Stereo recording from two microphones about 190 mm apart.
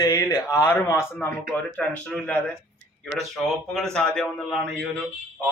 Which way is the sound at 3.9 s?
5° left (ahead or behind).